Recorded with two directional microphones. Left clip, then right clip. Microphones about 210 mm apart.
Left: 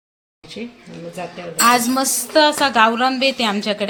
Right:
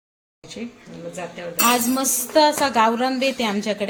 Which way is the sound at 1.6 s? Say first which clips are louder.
Left 5 dB; 10° left (ahead or behind).